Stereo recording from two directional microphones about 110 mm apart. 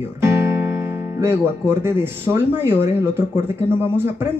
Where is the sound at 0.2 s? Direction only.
25° right (ahead or behind).